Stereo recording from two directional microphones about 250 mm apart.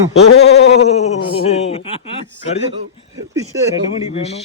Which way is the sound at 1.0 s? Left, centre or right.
Left.